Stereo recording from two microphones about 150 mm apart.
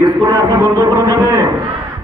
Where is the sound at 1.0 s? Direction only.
20° right (ahead or behind).